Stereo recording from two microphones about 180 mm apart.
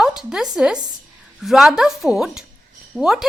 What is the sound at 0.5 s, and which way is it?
A woman's voice, 5° right (ahead or behind).